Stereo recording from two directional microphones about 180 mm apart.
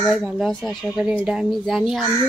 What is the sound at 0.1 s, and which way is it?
Speech, centre (ahead or behind).